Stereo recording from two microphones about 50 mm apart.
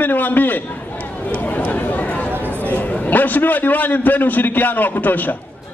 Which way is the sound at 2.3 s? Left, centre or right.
Right.